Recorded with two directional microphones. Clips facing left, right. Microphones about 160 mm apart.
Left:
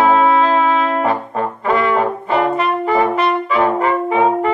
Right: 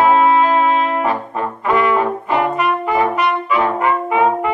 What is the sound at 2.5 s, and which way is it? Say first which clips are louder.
Brass instrument: left 1 dB; 30° left (ahead or behind).